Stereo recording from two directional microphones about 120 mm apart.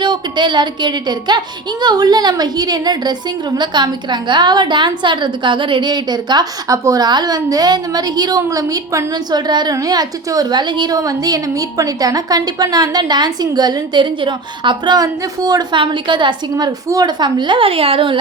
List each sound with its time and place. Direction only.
0.0 s a woman's voice: 40° right (ahead or behind)